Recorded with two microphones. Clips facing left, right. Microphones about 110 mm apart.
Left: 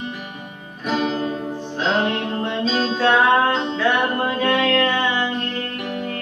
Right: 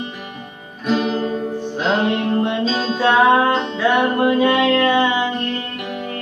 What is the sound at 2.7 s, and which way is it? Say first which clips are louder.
Music: right 1 dB; 5° right (ahead or behind).